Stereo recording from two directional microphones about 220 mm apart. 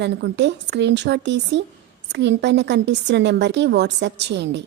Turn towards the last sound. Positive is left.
turn(degrees=-50)  # may be behind; listen again after turning